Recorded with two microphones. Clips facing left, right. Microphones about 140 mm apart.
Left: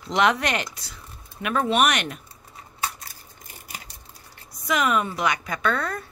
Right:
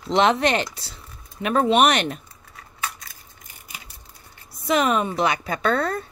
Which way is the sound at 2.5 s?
30° left (ahead or behind).